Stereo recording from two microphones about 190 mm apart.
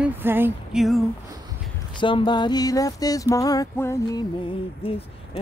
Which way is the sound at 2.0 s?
25° left (ahead or behind).